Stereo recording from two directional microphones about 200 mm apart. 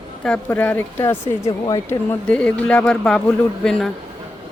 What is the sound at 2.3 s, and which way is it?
A woman's voice, 5° left (ahead or behind).